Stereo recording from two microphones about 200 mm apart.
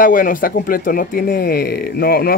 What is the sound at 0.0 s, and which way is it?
Speech, 45° left (ahead or behind).